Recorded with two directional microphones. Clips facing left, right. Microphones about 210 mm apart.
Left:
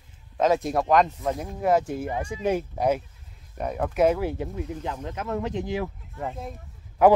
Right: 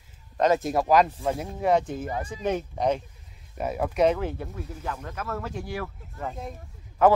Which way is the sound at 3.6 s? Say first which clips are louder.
Even; 5° right (ahead or behind).